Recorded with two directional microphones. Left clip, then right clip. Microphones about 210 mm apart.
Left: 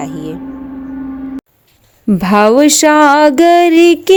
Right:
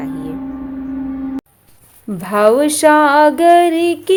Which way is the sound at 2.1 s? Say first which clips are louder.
Left 3 dB; 50° left (ahead or behind).